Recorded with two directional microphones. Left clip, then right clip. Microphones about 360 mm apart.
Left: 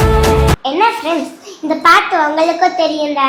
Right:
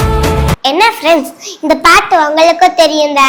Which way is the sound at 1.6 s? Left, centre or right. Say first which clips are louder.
Right 3 dB; right.